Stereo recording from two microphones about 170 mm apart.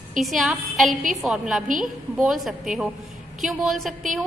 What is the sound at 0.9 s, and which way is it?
Speech, 50° right (ahead or behind).